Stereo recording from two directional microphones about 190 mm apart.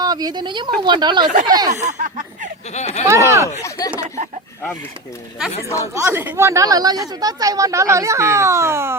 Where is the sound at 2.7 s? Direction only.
35° left (ahead or behind).